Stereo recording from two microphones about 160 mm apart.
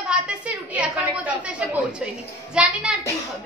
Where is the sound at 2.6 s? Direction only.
5° right (ahead or behind).